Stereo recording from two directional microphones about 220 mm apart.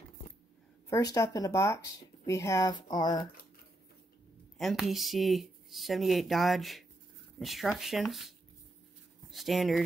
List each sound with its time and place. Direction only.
0.8 s speech: 15° left (ahead or behind)
4.6 s speech: centre (ahead or behind)